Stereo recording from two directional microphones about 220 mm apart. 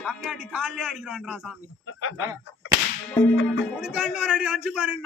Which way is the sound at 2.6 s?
60° left (ahead or behind).